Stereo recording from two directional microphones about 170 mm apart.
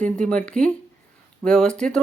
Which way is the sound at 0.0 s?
5° left (ahead or behind).